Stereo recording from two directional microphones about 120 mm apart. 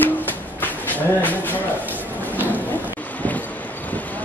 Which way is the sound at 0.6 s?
15° left (ahead or behind).